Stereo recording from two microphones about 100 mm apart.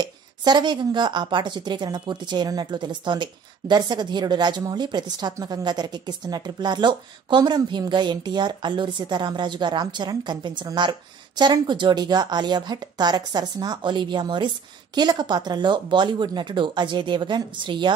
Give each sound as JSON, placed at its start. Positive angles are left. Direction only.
{"t": 0.0, "sound": "a woman's voice", "side_deg": -45}